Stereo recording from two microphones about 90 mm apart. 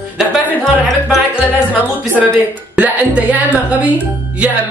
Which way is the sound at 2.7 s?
15° right (ahead or behind).